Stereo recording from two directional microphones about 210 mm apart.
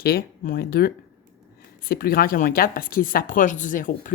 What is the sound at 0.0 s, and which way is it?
A woman's voice, 45° left (ahead or behind).